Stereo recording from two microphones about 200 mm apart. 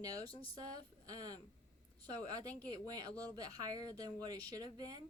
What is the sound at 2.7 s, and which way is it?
Speech, 20° right (ahead or behind).